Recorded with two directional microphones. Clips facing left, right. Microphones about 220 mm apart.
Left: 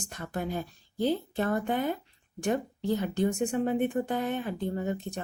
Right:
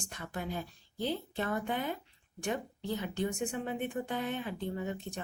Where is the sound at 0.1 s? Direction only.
45° left (ahead or behind).